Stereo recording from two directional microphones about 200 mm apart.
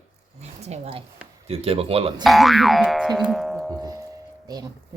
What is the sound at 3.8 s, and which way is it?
Music, 15° right (ahead or behind).